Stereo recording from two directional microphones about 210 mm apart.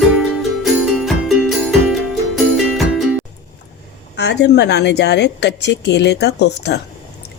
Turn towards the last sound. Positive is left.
turn(degrees=55)  # may be behind; listen again after turning